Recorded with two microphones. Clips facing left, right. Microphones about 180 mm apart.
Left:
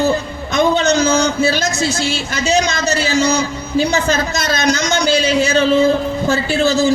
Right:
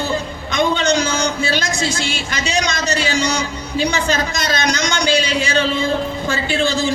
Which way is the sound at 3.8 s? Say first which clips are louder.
Left 3 dB; 40° left (ahead or behind).